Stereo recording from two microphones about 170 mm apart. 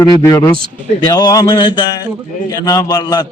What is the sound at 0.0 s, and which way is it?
A man's voice, 20° left (ahead or behind).